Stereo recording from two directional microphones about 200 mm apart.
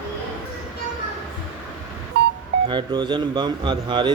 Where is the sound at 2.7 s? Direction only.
20° right (ahead or behind).